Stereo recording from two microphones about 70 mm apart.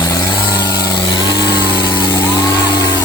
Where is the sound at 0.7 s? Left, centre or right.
Left.